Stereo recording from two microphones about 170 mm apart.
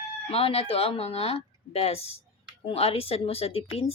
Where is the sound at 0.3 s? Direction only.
35° left (ahead or behind).